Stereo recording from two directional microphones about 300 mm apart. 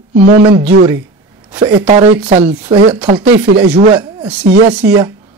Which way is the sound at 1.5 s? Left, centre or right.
Centre.